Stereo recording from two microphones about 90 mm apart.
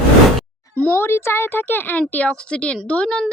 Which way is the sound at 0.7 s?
20° left (ahead or behind).